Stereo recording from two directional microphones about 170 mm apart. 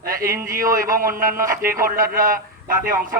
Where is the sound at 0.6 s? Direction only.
55° right (ahead or behind).